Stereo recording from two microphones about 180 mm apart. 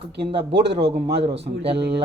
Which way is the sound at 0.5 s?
70° right (ahead or behind).